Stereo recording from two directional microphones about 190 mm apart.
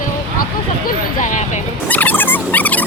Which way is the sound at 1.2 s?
40° left (ahead or behind).